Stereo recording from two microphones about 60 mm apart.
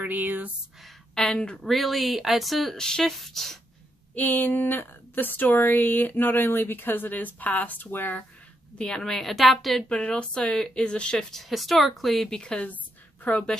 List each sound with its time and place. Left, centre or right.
0.0 s speech: right
1.1 s speech: centre
1.7 s a woman's voice: centre
2.8 s a woman's voice: centre
4.1 s speech: left
8.7 s a woman's voice: centre
9.8 s speech: centre
11.3 s a woman's voice: centre
12.4 s speech: centre